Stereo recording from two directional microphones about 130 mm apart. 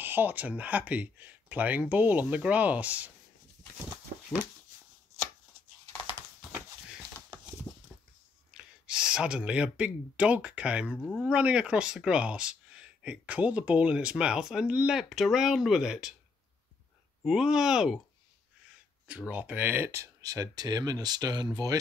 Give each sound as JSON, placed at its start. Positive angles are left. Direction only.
{"t": 0.0, "sound": "speech", "side_deg": -15}
{"t": 8.5, "sound": "speech", "side_deg": -5}
{"t": 17.2, "sound": "speech", "side_deg": -5}
{"t": 19.0, "sound": "speech", "side_deg": -10}